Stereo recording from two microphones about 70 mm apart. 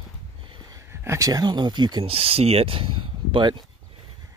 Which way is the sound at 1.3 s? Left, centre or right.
Right.